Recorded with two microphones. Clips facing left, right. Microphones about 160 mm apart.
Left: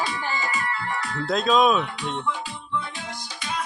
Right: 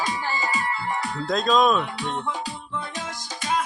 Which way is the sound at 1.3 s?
5° left (ahead or behind).